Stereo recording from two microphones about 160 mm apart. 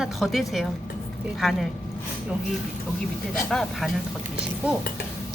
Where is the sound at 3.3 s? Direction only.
5° left (ahead or behind).